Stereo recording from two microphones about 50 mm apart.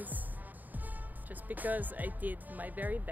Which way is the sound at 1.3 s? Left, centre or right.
Right.